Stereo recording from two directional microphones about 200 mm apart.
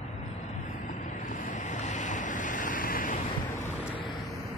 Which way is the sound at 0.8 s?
40° left (ahead or behind).